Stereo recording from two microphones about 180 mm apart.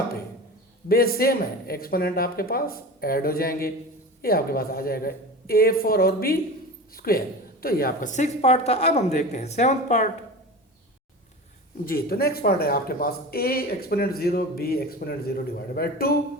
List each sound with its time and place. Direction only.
0.9 s speech: 55° left (ahead or behind)
11.9 s speech: 55° left (ahead or behind)